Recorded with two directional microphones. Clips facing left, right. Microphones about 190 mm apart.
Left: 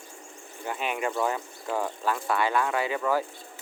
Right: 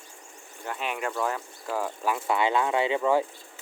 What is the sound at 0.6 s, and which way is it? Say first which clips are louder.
Speech: left 2 dB; centre (ahead or behind).